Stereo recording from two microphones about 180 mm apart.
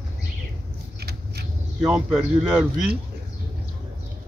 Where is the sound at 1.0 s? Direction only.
65° right (ahead or behind).